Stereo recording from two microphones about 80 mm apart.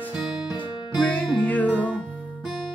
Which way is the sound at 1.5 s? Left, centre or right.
Centre.